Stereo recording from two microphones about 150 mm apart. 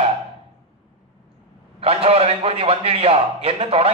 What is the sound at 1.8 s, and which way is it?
A man's voice, 40° right (ahead or behind).